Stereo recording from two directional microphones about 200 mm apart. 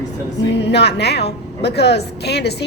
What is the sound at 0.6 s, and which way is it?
A woman's voice, 60° left (ahead or behind).